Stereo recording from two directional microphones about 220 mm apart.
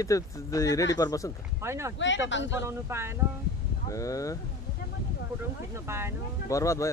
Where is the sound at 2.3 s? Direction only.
55° left (ahead or behind).